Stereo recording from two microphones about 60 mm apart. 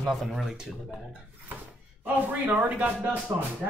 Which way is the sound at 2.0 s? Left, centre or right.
Right.